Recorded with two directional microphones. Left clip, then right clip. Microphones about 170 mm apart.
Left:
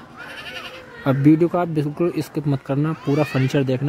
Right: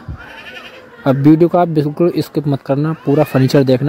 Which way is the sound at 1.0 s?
20° right (ahead or behind).